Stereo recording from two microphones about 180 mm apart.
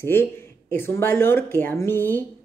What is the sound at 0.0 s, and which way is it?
Speech, 15° left (ahead or behind).